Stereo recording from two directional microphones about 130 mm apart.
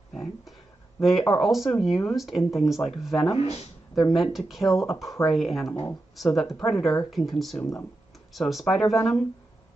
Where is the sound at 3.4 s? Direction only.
50° left (ahead or behind).